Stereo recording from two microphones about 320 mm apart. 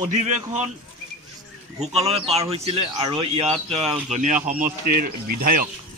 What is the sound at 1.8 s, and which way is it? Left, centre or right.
Speech, centre.